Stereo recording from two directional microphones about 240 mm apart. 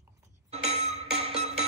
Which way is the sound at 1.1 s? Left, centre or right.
Right.